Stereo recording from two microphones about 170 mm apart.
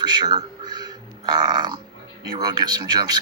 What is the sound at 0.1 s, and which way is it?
A man's voice, 25° right (ahead or behind).